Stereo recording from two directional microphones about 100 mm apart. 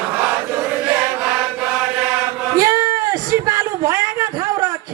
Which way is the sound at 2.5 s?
35° right (ahead or behind).